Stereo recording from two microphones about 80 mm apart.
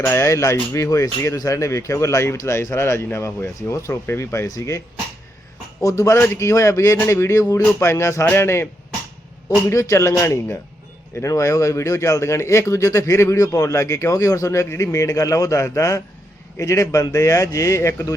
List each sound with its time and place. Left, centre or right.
0.0 s speech: left
5.8 s speech: left
9.6 s speech: left